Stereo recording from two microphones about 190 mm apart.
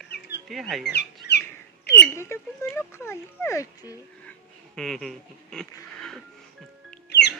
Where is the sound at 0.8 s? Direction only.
60° left (ahead or behind).